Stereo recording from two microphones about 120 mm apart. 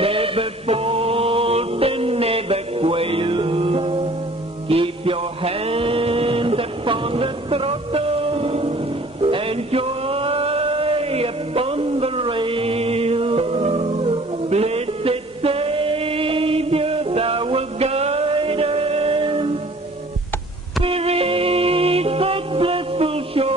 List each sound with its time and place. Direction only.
0.0 s music: 50° right (ahead or behind)
20.8 s music: 55° right (ahead or behind)